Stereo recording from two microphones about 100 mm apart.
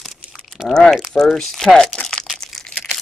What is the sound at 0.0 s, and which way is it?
Crumpling, centre (ahead or behind).